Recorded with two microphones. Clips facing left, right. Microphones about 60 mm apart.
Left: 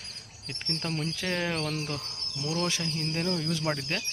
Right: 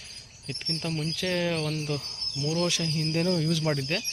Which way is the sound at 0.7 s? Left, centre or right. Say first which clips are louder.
Right 1 dB; left.